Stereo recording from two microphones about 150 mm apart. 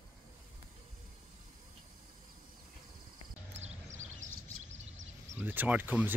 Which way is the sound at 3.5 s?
50° right (ahead or behind).